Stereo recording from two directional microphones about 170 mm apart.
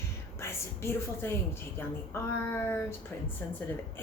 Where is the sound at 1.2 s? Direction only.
15° left (ahead or behind).